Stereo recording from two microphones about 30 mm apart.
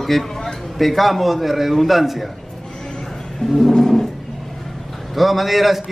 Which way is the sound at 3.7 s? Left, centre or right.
Centre.